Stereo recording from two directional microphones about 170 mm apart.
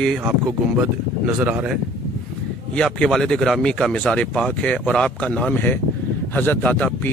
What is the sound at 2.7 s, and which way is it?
Speech, 5° left (ahead or behind).